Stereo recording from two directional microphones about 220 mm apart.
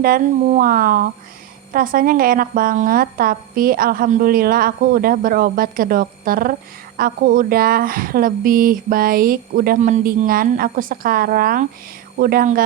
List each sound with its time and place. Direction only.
0.0 s a woman's voice: 35° right (ahead or behind)